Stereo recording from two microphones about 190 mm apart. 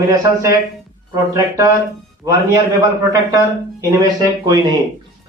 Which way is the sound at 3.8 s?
20° right (ahead or behind).